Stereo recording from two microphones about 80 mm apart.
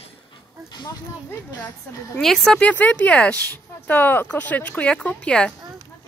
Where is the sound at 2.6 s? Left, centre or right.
Left.